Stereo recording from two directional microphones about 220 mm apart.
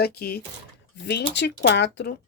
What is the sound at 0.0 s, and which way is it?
Speech, 45° left (ahead or behind).